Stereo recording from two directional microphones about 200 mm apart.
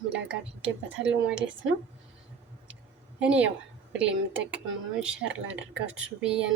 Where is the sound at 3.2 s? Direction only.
5° right (ahead or behind).